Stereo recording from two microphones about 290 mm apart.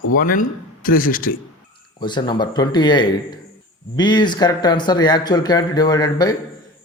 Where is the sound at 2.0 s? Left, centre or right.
Centre.